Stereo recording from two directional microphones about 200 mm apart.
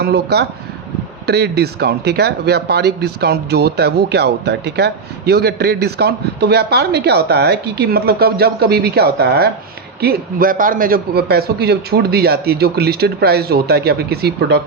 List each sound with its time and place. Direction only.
0.0 s speech: 55° right (ahead or behind)